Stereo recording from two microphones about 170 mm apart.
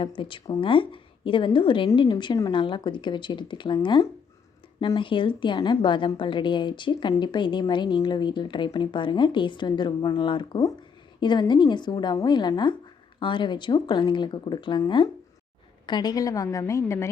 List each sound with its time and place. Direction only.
0.2 s a woman's voice: 30° left (ahead or behind)